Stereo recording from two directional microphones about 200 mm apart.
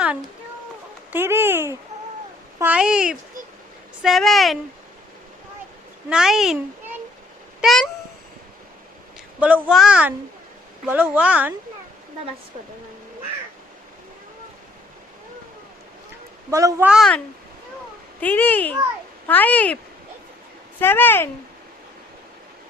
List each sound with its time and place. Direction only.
1.1 s a child's voice: 10° right (ahead or behind)
6.1 s a child's voice: 5° right (ahead or behind)
7.6 s cat: centre (ahead or behind)
9.4 s a child's voice: 5° right (ahead or behind)
16.5 s speech: 15° right (ahead or behind)
16.9 s a child's voice: centre (ahead or behind)
18.2 s a child's voice: 10° left (ahead or behind)